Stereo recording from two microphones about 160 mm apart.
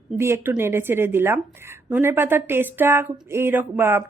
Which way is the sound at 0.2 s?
15° right (ahead or behind).